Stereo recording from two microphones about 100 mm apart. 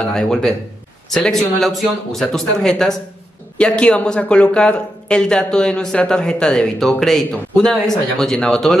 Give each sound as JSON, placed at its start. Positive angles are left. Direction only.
{"t": 0.1, "sound": "speech", "side_deg": 5}